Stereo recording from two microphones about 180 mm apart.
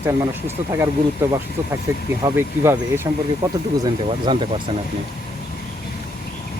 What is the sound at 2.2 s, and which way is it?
Speech, 15° right (ahead or behind).